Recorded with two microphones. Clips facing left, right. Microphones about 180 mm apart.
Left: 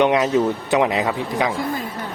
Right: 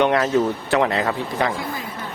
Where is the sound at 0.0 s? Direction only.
20° left (ahead or behind).